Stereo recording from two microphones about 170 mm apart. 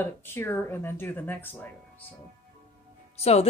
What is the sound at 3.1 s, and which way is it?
Speech, 35° left (ahead or behind).